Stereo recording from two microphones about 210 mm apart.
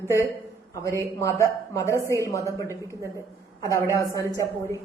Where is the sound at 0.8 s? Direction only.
15° left (ahead or behind).